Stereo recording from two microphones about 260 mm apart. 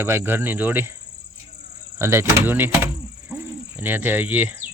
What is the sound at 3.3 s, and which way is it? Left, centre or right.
Owl, centre.